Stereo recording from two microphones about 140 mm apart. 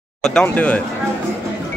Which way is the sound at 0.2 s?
5° left (ahead or behind).